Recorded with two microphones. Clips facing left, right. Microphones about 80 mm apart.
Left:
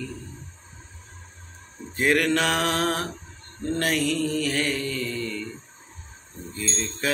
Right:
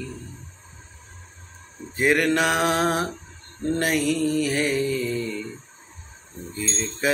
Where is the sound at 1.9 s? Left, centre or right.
Centre.